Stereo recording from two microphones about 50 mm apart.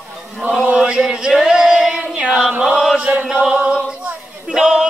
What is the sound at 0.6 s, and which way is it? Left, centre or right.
Chant, centre.